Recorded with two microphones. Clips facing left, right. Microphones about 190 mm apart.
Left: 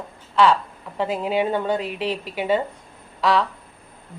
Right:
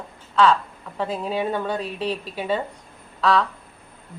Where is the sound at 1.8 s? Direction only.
90° left.